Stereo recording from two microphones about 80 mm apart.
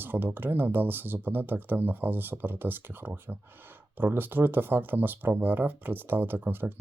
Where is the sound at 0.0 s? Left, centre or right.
Right.